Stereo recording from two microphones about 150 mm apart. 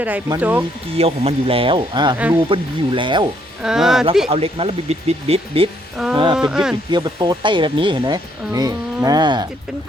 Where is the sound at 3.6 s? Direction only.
5° right (ahead or behind).